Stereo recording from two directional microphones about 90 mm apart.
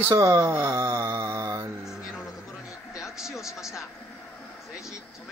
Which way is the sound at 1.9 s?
5° right (ahead or behind).